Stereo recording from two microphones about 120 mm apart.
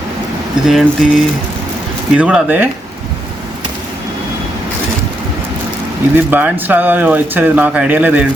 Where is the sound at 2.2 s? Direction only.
10° right (ahead or behind).